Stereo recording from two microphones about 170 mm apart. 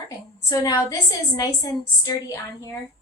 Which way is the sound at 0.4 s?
20° left (ahead or behind).